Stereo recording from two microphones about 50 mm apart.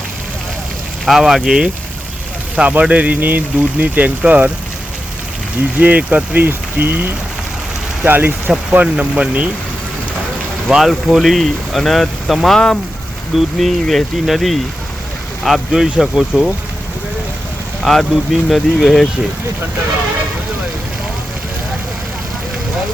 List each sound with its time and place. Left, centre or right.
1.0 s speech: centre
2.6 s speech: right
5.8 s speech: right
10.8 s speech: centre
18.1 s speech: centre